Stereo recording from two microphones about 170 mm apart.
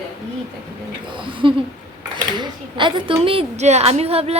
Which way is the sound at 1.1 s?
30° right (ahead or behind).